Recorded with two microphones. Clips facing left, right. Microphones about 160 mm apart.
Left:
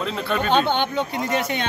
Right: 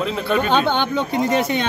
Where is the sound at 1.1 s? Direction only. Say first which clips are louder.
Right 7 dB; 30° right (ahead or behind).